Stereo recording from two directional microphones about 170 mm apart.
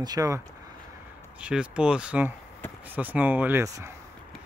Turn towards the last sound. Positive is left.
turn(degrees=-15)  # may be behind; listen again after turning